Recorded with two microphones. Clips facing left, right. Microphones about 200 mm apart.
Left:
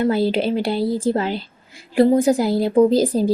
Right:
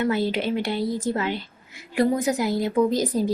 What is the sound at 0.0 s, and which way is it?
A woman's voice, 35° left (ahead or behind).